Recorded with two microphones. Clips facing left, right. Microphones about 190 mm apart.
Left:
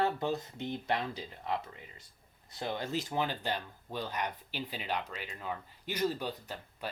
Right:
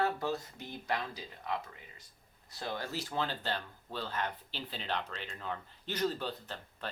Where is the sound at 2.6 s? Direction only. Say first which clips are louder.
Left 3 dB; 20° left (ahead or behind).